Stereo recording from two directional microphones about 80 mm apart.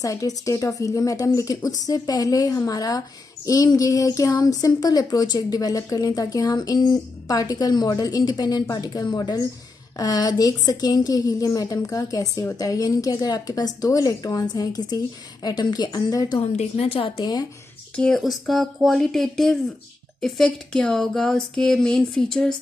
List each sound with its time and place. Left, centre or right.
0.0 s a woman's voice: left
17.9 s speech: centre